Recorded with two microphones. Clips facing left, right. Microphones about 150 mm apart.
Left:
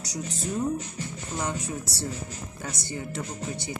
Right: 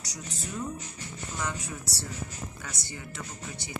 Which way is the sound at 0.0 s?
25° left (ahead or behind).